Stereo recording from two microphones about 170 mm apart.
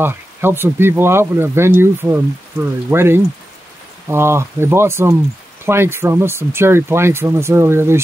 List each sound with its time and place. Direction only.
0.0 s speech: 15° right (ahead or behind)